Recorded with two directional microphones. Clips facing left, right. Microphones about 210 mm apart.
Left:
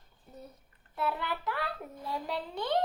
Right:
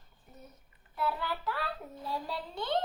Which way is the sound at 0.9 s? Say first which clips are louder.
Left 1 dB; 20° left (ahead or behind).